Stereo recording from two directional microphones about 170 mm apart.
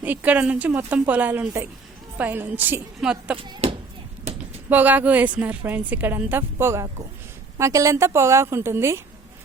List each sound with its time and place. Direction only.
0.0 s a woman's voice: 10° right (ahead or behind)
3.3 s speech: 30° right (ahead or behind)
4.7 s a woman's voice: 10° right (ahead or behind)